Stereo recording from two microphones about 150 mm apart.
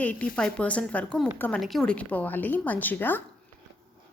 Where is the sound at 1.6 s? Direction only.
Centre (ahead or behind).